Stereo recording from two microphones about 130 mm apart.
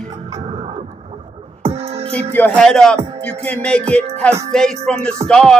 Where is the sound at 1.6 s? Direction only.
50° right (ahead or behind).